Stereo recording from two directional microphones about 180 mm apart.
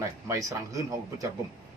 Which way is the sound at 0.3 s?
20° right (ahead or behind).